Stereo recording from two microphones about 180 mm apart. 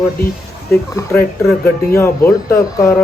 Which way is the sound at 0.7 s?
15° left (ahead or behind).